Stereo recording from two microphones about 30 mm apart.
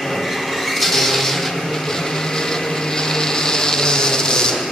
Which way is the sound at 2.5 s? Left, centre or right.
Centre.